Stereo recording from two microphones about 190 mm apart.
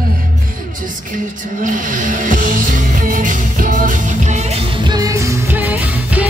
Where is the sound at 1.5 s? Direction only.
45° right (ahead or behind).